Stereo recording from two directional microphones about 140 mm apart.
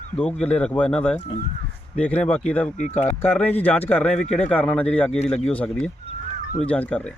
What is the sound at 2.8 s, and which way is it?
Speech, 55° left (ahead or behind).